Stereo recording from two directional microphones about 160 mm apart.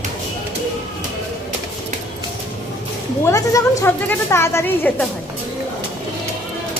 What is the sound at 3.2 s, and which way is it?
A woman's voice, 20° left (ahead or behind).